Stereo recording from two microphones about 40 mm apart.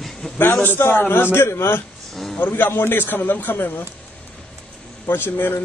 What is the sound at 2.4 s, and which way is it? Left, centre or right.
Speech, left.